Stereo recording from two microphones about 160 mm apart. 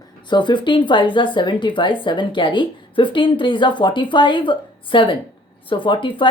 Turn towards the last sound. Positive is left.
turn(degrees=30)  # may be behind; listen again after turning